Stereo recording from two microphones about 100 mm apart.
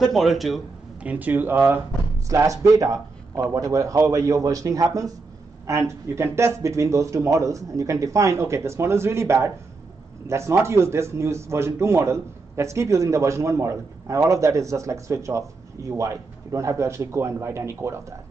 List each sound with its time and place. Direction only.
0.0 s speech: centre (ahead or behind)
1.0 s speech: 20° right (ahead or behind)
2.2 s speech: 35° right (ahead or behind)